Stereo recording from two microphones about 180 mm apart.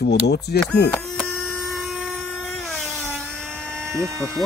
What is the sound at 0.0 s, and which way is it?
Speech, 65° left (ahead or behind).